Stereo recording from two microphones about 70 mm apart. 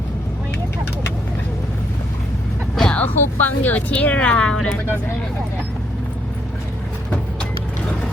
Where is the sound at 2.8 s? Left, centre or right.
Centre.